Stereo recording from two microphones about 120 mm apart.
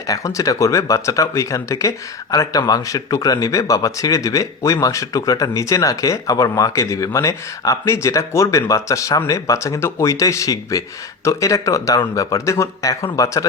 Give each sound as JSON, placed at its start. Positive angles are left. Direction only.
{"t": 0.1, "sound": "speech", "side_deg": 25}